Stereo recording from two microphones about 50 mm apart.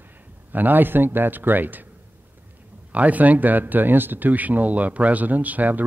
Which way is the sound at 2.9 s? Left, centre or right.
Right.